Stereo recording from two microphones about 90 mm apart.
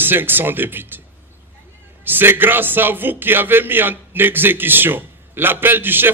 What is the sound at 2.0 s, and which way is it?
A man's voice, 25° right (ahead or behind).